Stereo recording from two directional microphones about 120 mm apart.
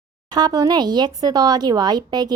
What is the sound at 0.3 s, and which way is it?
Speech, 35° right (ahead or behind).